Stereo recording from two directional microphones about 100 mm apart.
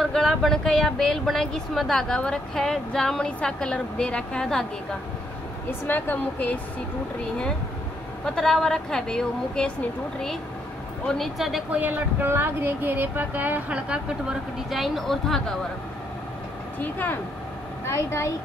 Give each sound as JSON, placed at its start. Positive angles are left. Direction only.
{"t": 0.0, "sound": "speech", "side_deg": 5}
{"t": 5.7, "sound": "speech", "side_deg": 20}
{"t": 8.4, "sound": "speech", "side_deg": 5}
{"t": 11.1, "sound": "speech", "side_deg": 0}
{"t": 11.7, "sound": "speech", "side_deg": -20}
{"t": 16.8, "sound": "speech", "side_deg": 20}
{"t": 17.8, "sound": "speech", "side_deg": 30}